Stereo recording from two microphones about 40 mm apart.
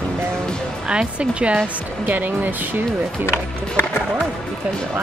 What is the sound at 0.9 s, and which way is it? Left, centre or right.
Speech, right.